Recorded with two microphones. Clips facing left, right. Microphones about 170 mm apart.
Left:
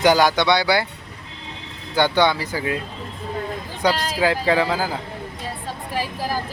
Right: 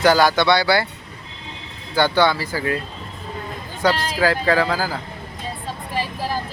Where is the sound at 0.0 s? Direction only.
15° left (ahead or behind).